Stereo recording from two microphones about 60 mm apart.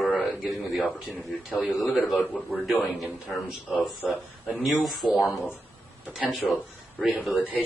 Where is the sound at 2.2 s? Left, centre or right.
Left.